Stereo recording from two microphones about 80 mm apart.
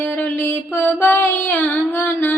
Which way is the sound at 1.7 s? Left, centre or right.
Left.